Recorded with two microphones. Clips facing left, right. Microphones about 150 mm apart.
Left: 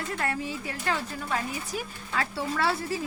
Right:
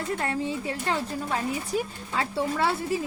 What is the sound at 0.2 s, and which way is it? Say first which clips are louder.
Speech: right 3 dB; 25° right (ahead or behind).